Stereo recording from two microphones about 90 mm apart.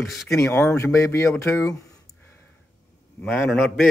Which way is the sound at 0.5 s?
30° left (ahead or behind).